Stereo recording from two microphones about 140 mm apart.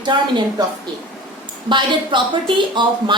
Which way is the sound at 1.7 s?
35° right (ahead or behind).